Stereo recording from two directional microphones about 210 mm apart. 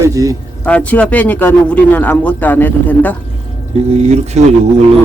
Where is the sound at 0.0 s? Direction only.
15° right (ahead or behind).